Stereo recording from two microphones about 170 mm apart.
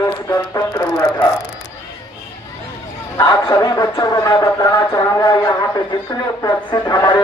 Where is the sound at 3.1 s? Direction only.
25° left (ahead or behind).